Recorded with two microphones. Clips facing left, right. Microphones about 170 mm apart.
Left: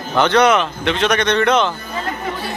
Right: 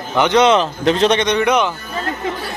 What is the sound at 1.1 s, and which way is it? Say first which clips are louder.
Speech: even; 15° right (ahead or behind).